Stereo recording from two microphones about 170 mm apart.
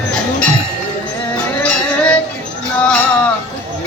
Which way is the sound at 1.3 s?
5° left (ahead or behind).